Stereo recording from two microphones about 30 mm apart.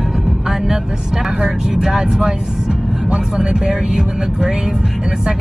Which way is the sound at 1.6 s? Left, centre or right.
Centre.